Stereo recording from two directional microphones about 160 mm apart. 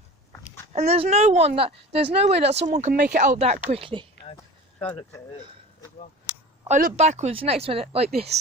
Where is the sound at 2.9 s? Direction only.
60° right (ahead or behind); by 4.1 s 35° right (ahead or behind).